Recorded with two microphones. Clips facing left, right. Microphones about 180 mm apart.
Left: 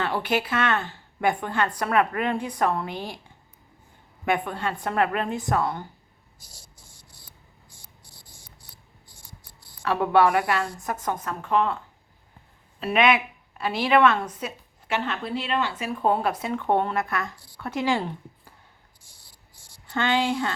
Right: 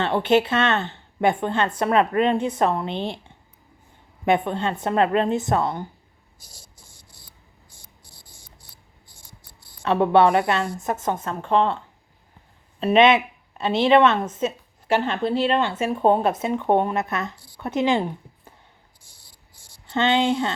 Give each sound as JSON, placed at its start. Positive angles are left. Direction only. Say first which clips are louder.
{"t": 0.0, "sound": "a woman's voice", "louder": "right 6 dB", "side_deg": -25}
{"t": 9.8, "sound": "a woman's voice", "louder": "right 3 dB", "side_deg": -25}
{"t": 12.8, "sound": "a woman's voice", "louder": "right 5 dB", "side_deg": -25}
{"t": 19.9, "sound": "a woman's voice", "louder": "right 4 dB", "side_deg": -20}